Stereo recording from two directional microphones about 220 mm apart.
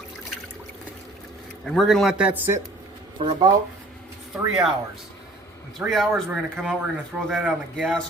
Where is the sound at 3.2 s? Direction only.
25° right (ahead or behind).